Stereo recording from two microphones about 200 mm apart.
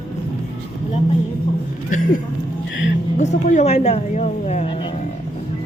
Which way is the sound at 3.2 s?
35° left (ahead or behind).